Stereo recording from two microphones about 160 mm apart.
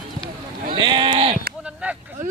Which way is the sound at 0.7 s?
30° right (ahead or behind).